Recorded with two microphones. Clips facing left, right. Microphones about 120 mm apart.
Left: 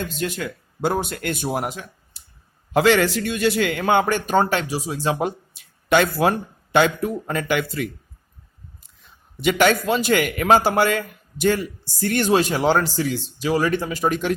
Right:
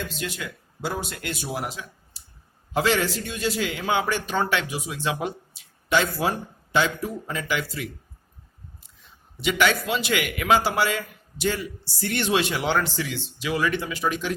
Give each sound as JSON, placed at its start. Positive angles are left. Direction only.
{"t": 0.1, "sound": "speech", "side_deg": 50}
{"t": 2.7, "sound": "a man's voice", "side_deg": 70}
{"t": 5.5, "sound": "a sound", "side_deg": 60}
{"t": 6.7, "sound": "a man's voice", "side_deg": 60}
{"t": 9.4, "sound": "a man's voice", "side_deg": 50}